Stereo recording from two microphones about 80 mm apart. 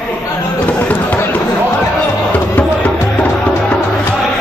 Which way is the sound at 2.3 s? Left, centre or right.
Centre.